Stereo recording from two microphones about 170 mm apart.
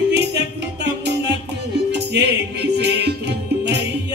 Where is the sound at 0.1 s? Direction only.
90° right.